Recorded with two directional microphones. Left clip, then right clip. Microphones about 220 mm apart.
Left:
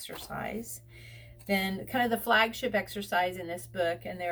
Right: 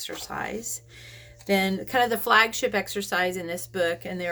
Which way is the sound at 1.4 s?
50° right (ahead or behind).